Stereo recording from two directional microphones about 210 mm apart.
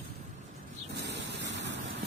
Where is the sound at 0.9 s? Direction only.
55° right (ahead or behind).